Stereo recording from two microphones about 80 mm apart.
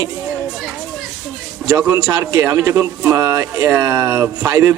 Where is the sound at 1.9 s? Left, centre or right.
Right.